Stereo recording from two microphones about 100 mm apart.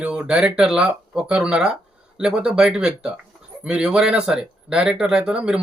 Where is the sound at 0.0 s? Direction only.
10° right (ahead or behind).